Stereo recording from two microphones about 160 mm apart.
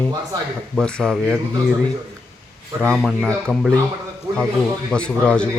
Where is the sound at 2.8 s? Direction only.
5° left (ahead or behind).